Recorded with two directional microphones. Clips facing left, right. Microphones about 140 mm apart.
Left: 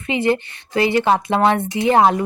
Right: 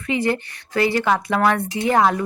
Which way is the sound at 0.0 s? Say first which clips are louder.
Left 3 dB; 20° left (ahead or behind).